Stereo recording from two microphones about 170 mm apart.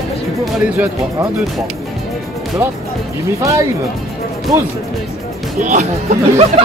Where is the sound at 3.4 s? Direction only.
20° right (ahead or behind).